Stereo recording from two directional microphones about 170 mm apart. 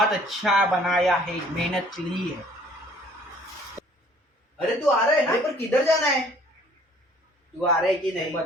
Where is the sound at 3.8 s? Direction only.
15° right (ahead or behind).